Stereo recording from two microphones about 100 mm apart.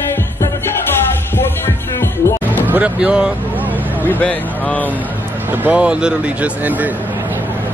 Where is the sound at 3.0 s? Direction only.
10° right (ahead or behind).